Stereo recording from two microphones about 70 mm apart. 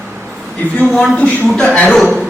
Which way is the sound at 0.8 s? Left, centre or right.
Centre.